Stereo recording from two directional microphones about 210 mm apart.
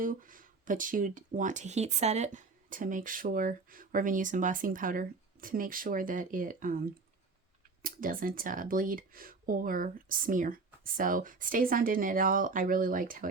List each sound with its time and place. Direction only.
0.0 s speech: 40° right (ahead or behind)